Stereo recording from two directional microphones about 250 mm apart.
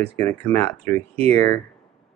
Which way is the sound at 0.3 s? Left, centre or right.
Centre.